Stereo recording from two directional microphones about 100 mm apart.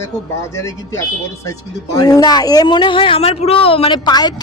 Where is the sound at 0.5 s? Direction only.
30° left (ahead or behind); by 3.9 s 70° left (ahead or behind).